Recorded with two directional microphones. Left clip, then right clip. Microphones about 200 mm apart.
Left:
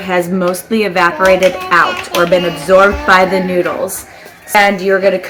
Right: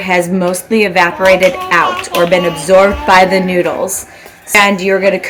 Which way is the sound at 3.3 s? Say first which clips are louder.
Right 2 dB; 20° right (ahead or behind).